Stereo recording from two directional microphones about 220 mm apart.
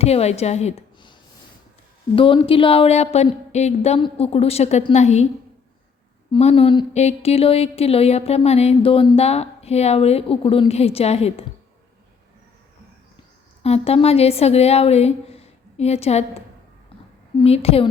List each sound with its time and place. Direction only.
0.0 s a woman's voice: 30° left (ahead or behind)
2.1 s speech: 25° left (ahead or behind)
6.3 s speech: 25° left (ahead or behind)
13.6 s speech: 30° left (ahead or behind)
17.4 s speech: 25° left (ahead or behind)